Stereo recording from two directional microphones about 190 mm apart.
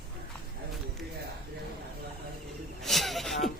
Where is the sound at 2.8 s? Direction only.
Centre (ahead or behind).